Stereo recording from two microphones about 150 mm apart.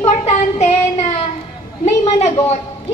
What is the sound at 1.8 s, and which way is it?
Speech, 45° left (ahead or behind).